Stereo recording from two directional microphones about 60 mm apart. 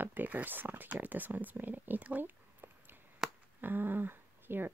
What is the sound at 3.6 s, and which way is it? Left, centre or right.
Speech, right.